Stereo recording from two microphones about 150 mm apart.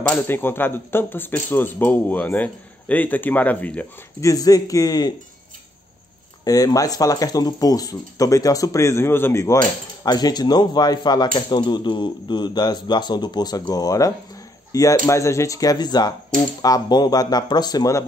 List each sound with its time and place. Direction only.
0.1 s speech: 15° left (ahead or behind)
4.2 s speech: 25° left (ahead or behind)
6.4 s speech: 25° left (ahead or behind)